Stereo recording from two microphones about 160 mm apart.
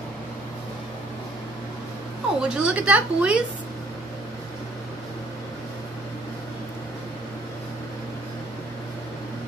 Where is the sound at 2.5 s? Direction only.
5° right (ahead or behind).